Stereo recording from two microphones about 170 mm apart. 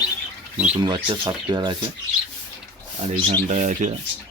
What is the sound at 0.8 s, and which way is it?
Speech, 25° right (ahead or behind).